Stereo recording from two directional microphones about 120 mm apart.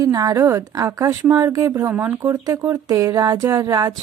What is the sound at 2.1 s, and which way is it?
Speech, 25° right (ahead or behind).